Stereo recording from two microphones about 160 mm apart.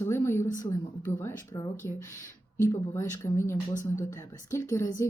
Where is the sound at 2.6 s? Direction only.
15° left (ahead or behind).